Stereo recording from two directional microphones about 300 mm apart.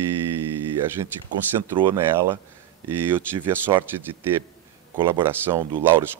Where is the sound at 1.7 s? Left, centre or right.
Centre.